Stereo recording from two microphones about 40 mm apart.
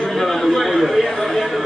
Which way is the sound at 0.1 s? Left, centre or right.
Centre.